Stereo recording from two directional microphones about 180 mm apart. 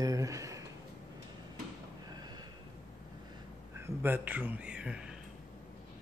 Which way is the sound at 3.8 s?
10° right (ahead or behind).